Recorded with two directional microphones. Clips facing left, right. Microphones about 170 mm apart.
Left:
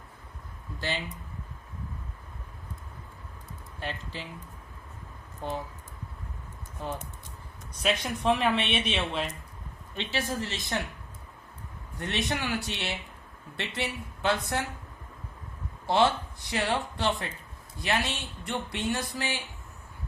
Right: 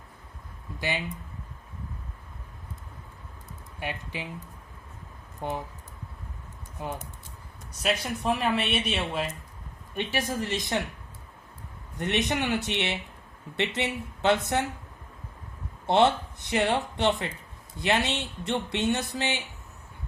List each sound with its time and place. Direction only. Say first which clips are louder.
0.8 s speech: right 2 dB; 15° right (ahead or behind)
3.8 s speech: right 2 dB; 15° right (ahead or behind)
5.4 s speech: right 2 dB; 15° right (ahead or behind)
6.8 s speech: right 1 dB; 15° right (ahead or behind)
7.8 s speech: even; 5° right (ahead or behind); by 10.8 s 20° right (ahead or behind)
11.9 s speech: right 4 dB; 20° right (ahead or behind)
15.9 s speech: right 3 dB; 20° right (ahead or behind)